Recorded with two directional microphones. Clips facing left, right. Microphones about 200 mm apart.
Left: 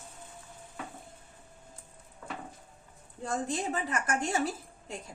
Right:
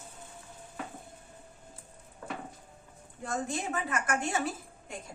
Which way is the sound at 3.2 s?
35° left (ahead or behind).